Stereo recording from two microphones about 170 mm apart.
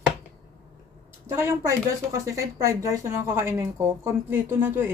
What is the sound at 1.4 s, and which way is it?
Speech, 20° right (ahead or behind).